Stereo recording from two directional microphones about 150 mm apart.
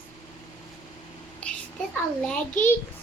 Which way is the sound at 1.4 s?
5° left (ahead or behind).